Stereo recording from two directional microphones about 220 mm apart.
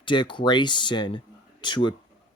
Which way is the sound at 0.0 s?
20° left (ahead or behind).